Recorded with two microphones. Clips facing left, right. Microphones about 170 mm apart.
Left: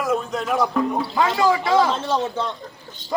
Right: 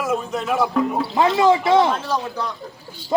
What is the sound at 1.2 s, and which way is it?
Speech, 25° right (ahead or behind).